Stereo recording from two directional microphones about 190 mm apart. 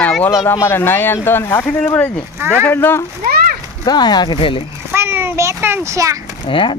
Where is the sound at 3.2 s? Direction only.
50° right (ahead or behind).